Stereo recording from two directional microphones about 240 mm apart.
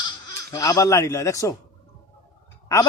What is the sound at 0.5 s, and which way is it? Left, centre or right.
A man's voice, centre.